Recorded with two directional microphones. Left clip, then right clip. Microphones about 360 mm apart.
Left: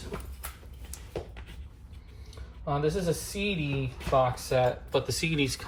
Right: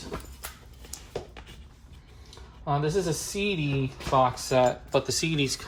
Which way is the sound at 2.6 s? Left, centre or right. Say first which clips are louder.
Right 2 dB; right.